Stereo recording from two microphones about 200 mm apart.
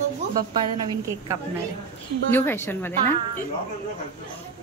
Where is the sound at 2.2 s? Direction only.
10° left (ahead or behind).